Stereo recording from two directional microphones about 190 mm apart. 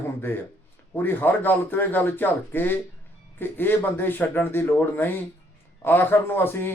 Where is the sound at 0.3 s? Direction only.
10° left (ahead or behind).